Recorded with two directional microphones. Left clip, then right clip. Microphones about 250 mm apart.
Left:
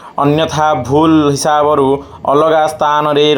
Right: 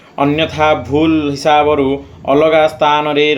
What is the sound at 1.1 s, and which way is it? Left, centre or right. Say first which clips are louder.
Speech: left 1 dB; left.